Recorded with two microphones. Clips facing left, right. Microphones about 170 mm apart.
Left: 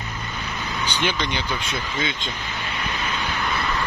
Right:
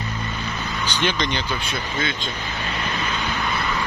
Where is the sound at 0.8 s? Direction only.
10° left (ahead or behind).